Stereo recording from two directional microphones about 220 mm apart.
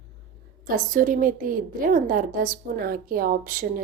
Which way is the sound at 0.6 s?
40° right (ahead or behind).